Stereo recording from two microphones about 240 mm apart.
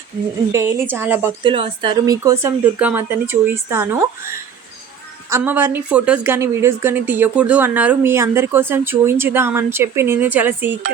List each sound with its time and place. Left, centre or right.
0.5 s a woman's voice: centre
1.4 s a woman's voice: right
5.3 s a woman's voice: centre